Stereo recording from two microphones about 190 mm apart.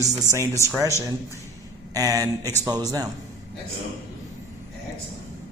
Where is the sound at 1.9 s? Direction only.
20° right (ahead or behind).